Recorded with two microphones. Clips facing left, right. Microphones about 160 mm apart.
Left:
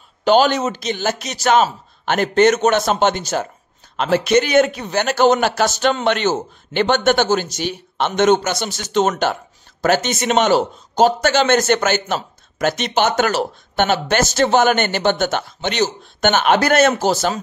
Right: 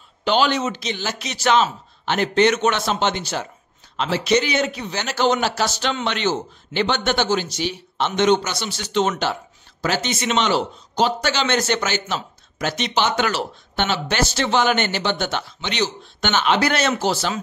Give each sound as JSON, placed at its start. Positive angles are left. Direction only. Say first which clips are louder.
{"t": 0.2, "sound": "a man's voice", "louder": "left 5 dB", "side_deg": 45}